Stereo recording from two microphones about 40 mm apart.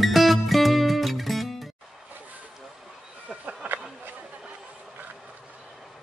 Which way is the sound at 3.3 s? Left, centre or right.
Right.